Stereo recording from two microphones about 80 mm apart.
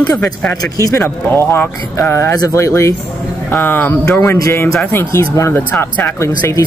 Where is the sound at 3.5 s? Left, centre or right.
Left.